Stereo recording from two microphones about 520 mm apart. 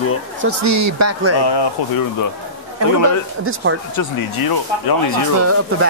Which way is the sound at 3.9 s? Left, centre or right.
Left.